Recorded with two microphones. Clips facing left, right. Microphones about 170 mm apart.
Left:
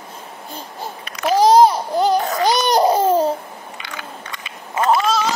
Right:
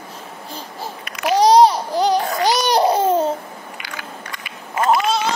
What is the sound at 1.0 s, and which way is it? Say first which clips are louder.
Babbling: left 1 dB; 35° left (ahead or behind).